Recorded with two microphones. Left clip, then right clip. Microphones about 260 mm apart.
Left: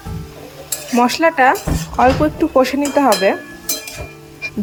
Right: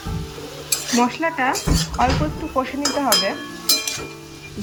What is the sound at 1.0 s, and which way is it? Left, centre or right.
Speech, left.